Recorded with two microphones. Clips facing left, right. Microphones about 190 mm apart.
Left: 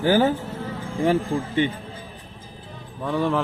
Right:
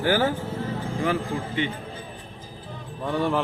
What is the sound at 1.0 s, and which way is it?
Speech, 35° left (ahead or behind).